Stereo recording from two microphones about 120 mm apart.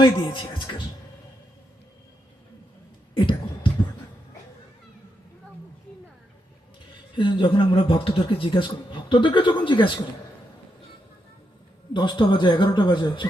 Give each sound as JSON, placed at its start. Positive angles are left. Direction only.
{"t": 0.0, "sound": "speech", "side_deg": 40}
{"t": 3.2, "sound": "a sound", "side_deg": 45}
{"t": 7.2, "sound": "a man's voice", "side_deg": 40}
{"t": 11.9, "sound": "speech", "side_deg": 40}